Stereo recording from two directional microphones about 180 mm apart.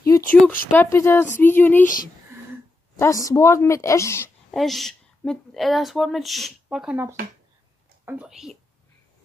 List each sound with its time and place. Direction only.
0.0 s a sound: 15° left (ahead or behind)
0.7 s a woman's voice: 15° left (ahead or behind)
3.0 s a woman's voice: 20° left (ahead or behind)
4.5 s a woman's voice: centre (ahead or behind)